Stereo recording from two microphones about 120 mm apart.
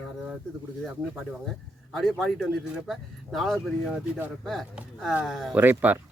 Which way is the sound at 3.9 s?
10° right (ahead or behind).